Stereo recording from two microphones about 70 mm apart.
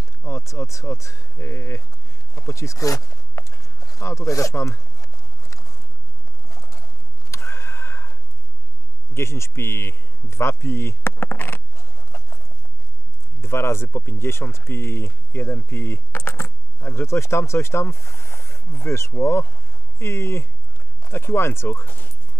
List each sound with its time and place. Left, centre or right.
0.2 s speech: left
2.3 s a sound: left
7.2 s neigh: left
9.1 s speech: left
10.6 s a sound: left
13.4 s speech: left